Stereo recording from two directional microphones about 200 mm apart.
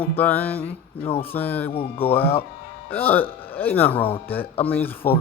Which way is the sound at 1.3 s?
10° left (ahead or behind).